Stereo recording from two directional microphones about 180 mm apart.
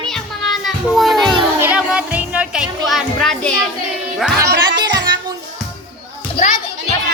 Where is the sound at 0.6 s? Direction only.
Centre (ahead or behind).